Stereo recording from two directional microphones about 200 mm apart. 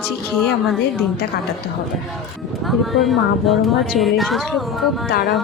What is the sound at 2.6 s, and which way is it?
A woman's voice, centre (ahead or behind).